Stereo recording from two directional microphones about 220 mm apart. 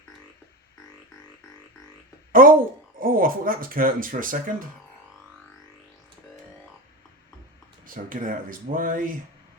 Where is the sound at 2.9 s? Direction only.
40° right (ahead or behind).